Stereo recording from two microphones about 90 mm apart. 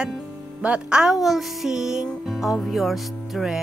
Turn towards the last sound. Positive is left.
turn(degrees=0)  # may be behind; listen again after turning